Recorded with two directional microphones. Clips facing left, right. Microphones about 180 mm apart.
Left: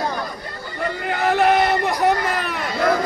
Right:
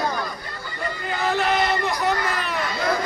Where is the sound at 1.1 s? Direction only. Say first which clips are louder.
Left 5 dB; 55° left (ahead or behind).